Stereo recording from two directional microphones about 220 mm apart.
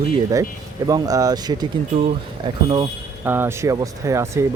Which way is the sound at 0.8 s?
15° right (ahead or behind).